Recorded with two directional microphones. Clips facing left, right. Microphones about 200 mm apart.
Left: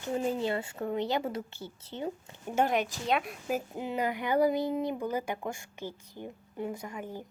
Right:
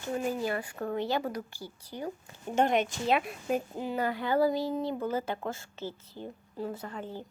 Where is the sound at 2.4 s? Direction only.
5° left (ahead or behind).